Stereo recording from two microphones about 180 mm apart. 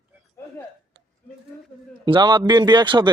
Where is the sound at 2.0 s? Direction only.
25° right (ahead or behind).